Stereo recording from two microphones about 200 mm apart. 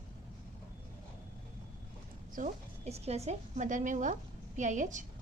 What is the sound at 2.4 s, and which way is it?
A woman's voice, 35° right (ahead or behind).